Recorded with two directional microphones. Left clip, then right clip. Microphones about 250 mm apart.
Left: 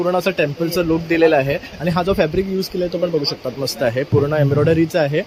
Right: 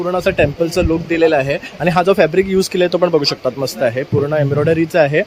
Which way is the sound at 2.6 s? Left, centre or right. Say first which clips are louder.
Right 7 dB; centre.